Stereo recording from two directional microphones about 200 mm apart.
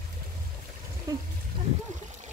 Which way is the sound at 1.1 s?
15° right (ahead or behind).